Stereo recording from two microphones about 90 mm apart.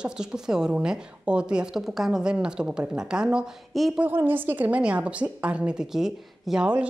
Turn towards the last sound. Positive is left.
turn(degrees=-10)  # may be behind; listen again after turning